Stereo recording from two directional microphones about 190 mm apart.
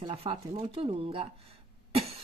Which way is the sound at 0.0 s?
30° right (ahead or behind).